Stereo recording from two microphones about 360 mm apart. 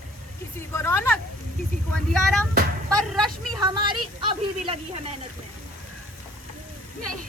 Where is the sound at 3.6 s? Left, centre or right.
Centre.